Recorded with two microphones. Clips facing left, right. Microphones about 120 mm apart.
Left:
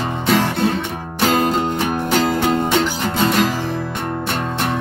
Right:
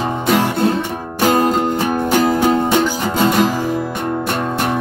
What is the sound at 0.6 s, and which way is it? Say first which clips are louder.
Music: right 3 dB; 35° right (ahead or behind).